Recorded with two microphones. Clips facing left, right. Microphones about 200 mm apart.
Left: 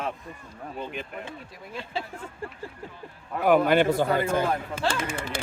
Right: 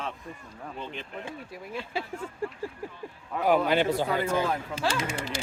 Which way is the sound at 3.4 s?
55° left (ahead or behind).